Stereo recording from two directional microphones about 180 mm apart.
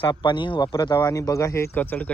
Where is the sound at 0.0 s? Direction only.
25° left (ahead or behind).